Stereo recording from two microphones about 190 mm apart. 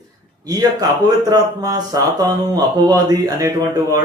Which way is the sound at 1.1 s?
20° right (ahead or behind).